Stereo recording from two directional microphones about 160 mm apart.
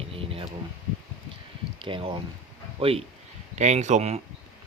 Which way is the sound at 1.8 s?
30° right (ahead or behind).